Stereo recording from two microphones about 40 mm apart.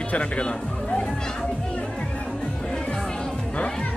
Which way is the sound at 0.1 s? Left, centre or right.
Left.